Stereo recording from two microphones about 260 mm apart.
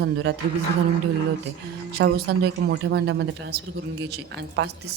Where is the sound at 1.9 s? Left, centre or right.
Right.